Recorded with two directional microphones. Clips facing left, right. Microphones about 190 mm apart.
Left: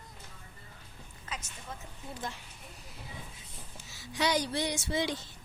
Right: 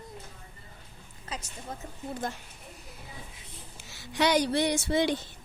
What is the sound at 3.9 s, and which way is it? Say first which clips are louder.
Speech: right 5 dB; 65° right (ahead or behind).